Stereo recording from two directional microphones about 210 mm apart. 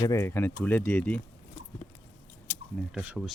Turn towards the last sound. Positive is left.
turn(degrees=-5)  # may be behind; listen again after turning